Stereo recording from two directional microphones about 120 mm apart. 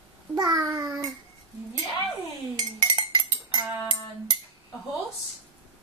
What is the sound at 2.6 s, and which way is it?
Dishes, 40° right (ahead or behind).